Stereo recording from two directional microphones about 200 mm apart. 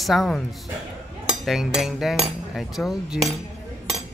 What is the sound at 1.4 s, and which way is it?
Speech, centre (ahead or behind).